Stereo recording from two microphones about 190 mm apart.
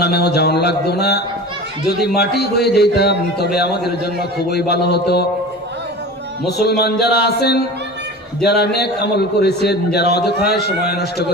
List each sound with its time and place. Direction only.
0.0 s a man's voice: 60° left (ahead or behind)
6.6 s a man's voice: 60° left (ahead or behind)